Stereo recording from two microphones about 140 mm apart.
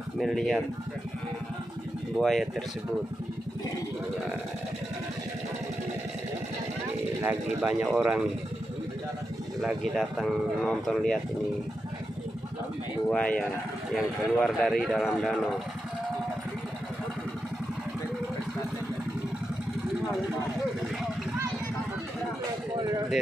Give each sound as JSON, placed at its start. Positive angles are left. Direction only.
{"t": 0.2, "sound": "speech", "side_deg": 0}
{"t": 2.1, "sound": "speech", "side_deg": 0}
{"t": 7.2, "sound": "speech", "side_deg": -15}
{"t": 9.6, "sound": "speech", "side_deg": -5}
{"t": 13.1, "sound": "speech", "side_deg": 5}
{"t": 22.8, "sound": "a sound", "side_deg": -25}